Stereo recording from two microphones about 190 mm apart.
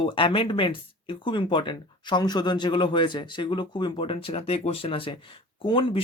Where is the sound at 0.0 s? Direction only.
25° left (ahead or behind).